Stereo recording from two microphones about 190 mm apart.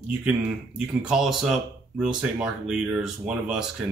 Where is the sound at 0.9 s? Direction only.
5° right (ahead or behind).